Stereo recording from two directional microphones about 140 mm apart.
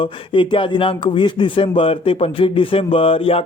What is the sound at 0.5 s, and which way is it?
A man's voice, 40° left (ahead or behind).